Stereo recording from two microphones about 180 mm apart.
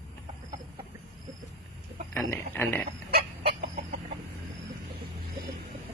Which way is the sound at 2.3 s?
15° left (ahead or behind).